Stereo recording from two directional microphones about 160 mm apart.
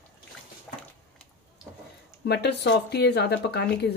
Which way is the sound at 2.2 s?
90° left.